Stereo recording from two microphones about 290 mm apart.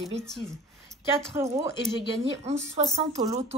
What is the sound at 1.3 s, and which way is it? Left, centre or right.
Speech, centre.